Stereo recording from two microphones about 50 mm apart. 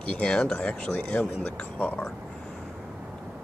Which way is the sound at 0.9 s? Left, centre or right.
Left.